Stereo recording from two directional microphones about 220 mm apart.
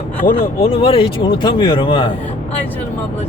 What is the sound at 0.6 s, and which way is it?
Speech, 25° left (ahead or behind).